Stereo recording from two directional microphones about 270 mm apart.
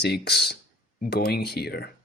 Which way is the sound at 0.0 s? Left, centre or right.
Left.